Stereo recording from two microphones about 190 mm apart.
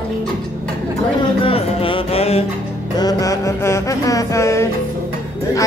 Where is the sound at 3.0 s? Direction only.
20° left (ahead or behind).